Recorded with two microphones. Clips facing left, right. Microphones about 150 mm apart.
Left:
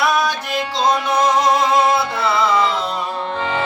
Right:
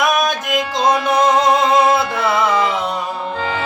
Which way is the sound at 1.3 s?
55° right (ahead or behind).